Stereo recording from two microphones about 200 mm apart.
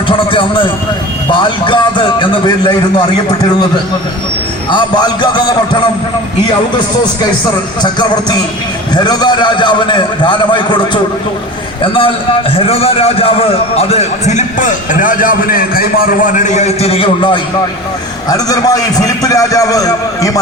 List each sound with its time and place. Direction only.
0.3 s a man's voice: 25° left (ahead or behind)
4.7 s a man's voice: 20° left (ahead or behind)
7.8 s a man's voice: 20° left (ahead or behind)